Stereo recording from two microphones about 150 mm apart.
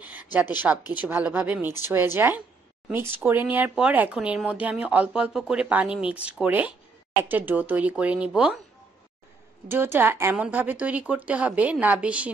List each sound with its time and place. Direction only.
0.0 s a sound: 10° right (ahead or behind)
0.9 s speech: 10° right (ahead or behind)
9.7 s speech: 15° right (ahead or behind)